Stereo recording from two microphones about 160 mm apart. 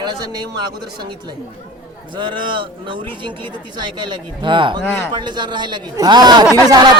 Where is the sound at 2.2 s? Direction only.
30° right (ahead or behind).